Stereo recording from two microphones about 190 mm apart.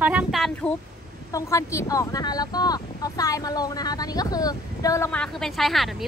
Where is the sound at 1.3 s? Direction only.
15° left (ahead or behind).